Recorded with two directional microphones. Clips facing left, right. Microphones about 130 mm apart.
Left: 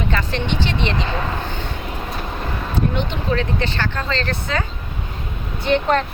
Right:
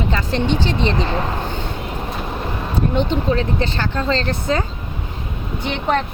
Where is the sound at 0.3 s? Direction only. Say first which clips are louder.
Right 4 dB; 40° right (ahead or behind).